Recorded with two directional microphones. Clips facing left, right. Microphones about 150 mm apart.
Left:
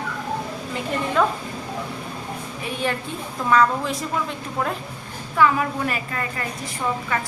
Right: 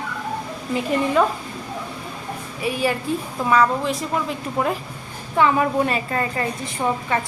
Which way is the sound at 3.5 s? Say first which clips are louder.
Right 1 dB; 5° right (ahead or behind).